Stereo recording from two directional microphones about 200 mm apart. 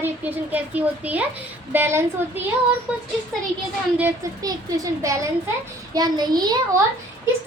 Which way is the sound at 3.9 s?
10° right (ahead or behind).